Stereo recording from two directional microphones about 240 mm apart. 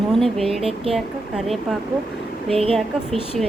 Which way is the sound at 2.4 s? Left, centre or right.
Right.